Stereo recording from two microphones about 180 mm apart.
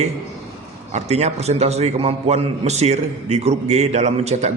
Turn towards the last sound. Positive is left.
turn(degrees=-40)  # may be behind; listen again after turning